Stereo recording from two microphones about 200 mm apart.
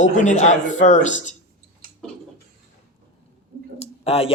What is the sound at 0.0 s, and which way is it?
A man's voice, 35° left (ahead or behind).